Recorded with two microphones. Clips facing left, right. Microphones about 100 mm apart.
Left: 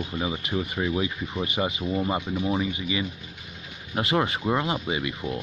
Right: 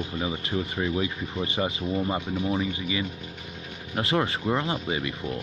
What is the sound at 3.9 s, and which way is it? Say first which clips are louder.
Speech: left 1 dB; 20° left (ahead or behind).